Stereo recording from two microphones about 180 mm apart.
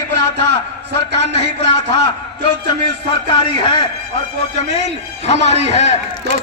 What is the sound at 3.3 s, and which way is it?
Speech, 30° left (ahead or behind).